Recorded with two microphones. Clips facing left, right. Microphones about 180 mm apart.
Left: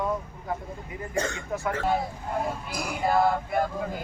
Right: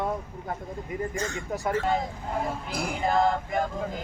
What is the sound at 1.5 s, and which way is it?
Speech, 35° right (ahead or behind).